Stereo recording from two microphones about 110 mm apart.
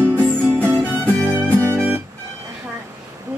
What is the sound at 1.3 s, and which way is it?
Music, 20° right (ahead or behind).